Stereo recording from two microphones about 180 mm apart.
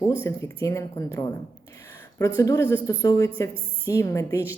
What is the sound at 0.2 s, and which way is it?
A woman's voice, 15° left (ahead or behind).